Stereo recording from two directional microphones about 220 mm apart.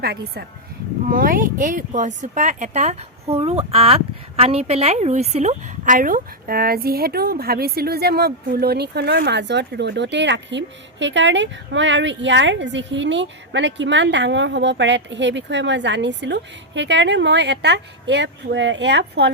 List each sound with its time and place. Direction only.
0.0 s a woman's voice: 45° right (ahead or behind)